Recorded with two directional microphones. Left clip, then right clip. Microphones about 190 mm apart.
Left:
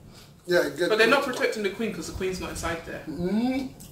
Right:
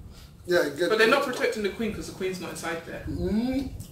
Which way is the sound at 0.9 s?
15° left (ahead or behind).